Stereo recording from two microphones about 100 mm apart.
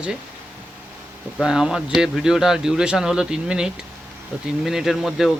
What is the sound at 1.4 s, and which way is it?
A man's voice, 5° right (ahead or behind).